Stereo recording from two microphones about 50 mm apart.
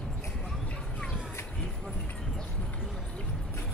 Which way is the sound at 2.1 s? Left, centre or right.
Centre.